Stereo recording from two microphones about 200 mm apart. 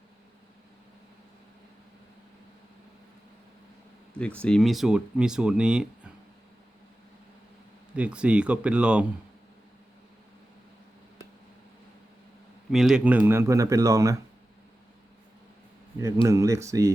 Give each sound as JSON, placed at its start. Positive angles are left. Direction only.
{"t": 4.4, "sound": "speech", "side_deg": 5}
{"t": 7.9, "sound": "speech", "side_deg": -5}
{"t": 12.7, "sound": "speech", "side_deg": 0}
{"t": 16.2, "sound": "speech", "side_deg": -15}